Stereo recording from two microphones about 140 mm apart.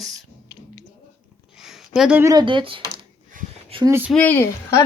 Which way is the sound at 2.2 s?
30° right (ahead or behind).